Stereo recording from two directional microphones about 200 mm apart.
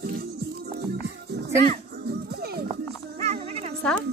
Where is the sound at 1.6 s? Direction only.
50° right (ahead or behind).